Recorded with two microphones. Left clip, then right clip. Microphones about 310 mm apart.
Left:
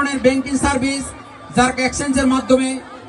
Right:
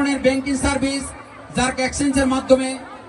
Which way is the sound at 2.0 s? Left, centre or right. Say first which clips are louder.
Right 1 dB; left.